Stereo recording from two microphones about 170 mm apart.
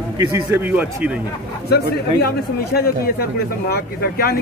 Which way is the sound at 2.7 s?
65° left (ahead or behind).